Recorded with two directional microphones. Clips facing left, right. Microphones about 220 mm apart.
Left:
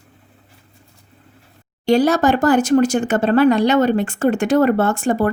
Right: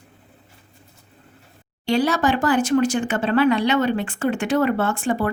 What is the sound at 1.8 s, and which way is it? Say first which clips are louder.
Speech: left 5 dB; 45° left (ahead or behind).